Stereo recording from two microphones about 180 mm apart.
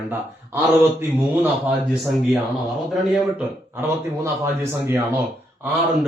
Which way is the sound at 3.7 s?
15° right (ahead or behind).